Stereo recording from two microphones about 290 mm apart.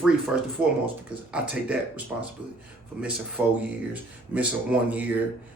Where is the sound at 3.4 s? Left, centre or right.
Centre.